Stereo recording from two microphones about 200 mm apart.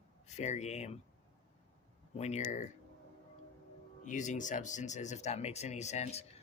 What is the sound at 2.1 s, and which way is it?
Speech, 35° left (ahead or behind).